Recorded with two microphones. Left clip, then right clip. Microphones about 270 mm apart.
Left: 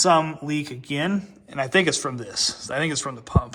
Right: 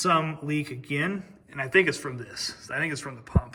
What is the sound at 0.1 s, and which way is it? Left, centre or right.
Speech, left.